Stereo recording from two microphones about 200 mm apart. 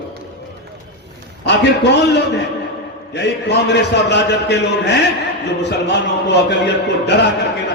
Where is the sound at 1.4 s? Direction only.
60° left (ahead or behind).